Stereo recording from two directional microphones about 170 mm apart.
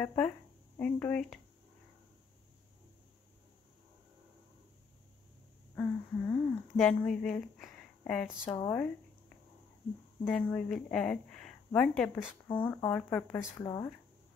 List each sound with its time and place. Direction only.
0.0 s speech: 10° left (ahead or behind)
5.8 s speech: 5° left (ahead or behind)
10.2 s speech: 5° left (ahead or behind)
12.5 s speech: 10° left (ahead or behind)